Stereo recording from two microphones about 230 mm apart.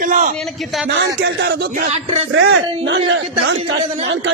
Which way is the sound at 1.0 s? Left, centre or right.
Right.